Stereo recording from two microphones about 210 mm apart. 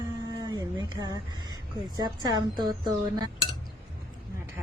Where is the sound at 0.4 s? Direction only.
20° right (ahead or behind).